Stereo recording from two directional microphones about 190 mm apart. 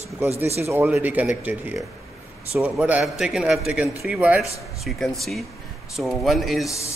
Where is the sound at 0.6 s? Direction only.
10° right (ahead or behind).